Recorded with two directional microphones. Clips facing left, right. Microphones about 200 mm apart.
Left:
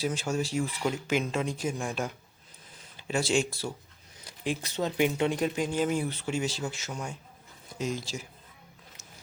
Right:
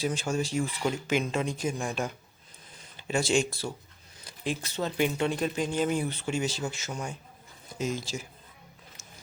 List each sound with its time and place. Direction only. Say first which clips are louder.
0.0 s speech: right 1 dB; 5° left (ahead or behind)